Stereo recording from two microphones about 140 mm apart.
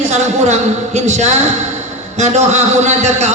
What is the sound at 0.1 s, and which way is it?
A woman's voice, 55° right (ahead or behind).